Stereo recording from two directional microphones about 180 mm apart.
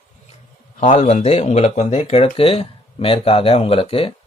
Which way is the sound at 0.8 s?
40° left (ahead or behind).